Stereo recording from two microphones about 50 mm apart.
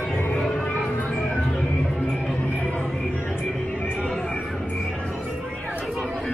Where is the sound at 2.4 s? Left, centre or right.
Left.